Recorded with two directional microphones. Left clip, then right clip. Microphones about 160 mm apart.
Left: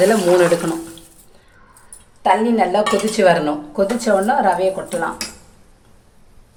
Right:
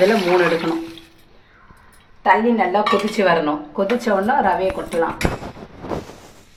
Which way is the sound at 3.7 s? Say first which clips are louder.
Left 3 dB; 25° left (ahead or behind).